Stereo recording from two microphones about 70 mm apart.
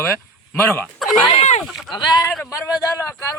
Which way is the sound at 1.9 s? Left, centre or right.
Left.